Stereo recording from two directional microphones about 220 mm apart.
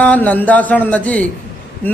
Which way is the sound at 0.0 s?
5° left (ahead or behind).